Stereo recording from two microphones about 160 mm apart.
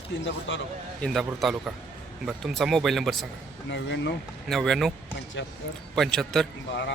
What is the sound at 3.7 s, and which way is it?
Speech, 90° left.